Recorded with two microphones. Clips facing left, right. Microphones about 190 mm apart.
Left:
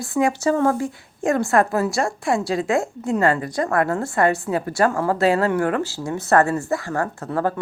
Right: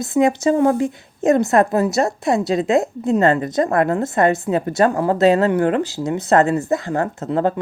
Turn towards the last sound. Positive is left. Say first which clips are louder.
# right 4 dB
turn(degrees=-20)  # may be behind; listen again after turning